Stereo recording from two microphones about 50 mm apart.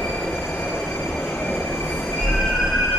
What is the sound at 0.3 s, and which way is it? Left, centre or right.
Train, left.